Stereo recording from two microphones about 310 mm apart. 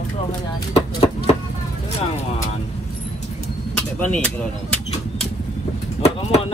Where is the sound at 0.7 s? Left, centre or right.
Centre.